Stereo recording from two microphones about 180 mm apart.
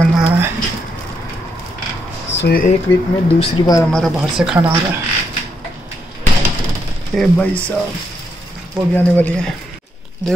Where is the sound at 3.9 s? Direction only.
Centre (ahead or behind).